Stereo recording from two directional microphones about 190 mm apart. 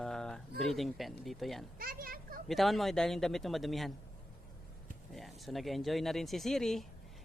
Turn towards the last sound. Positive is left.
turn(degrees=0)  # may be behind; listen again after turning